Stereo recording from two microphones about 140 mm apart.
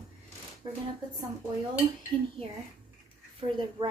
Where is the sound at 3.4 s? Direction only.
35° right (ahead or behind).